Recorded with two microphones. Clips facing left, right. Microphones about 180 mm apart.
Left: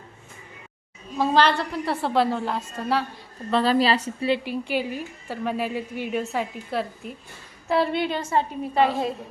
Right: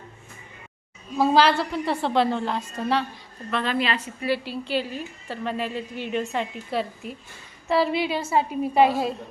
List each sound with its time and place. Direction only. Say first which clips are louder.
1.2 s a woman's voice: right 1 dB; 5° right (ahead or behind)
3.5 s a woman's voice: left 5 dB; 35° left (ahead or behind)
4.3 s a woman's voice: left 1 dB; 15° left (ahead or behind); by 9.0 s 15° right (ahead or behind)